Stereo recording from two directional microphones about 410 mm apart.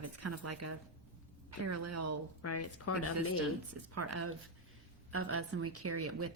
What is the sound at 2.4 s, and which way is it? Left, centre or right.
Speech, left.